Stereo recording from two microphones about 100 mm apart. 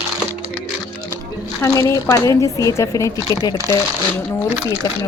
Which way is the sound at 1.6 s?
30° left (ahead or behind).